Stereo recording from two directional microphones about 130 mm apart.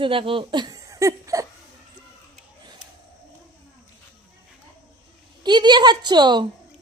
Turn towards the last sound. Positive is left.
turn(degrees=-35)  # may be behind; listen again after turning